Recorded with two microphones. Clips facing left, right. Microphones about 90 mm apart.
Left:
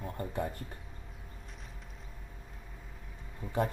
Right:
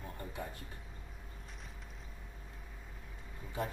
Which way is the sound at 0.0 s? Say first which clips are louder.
Left 7 dB; 50° left (ahead or behind).